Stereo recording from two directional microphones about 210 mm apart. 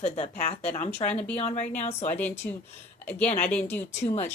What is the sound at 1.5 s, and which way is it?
Speech, 35° left (ahead or behind).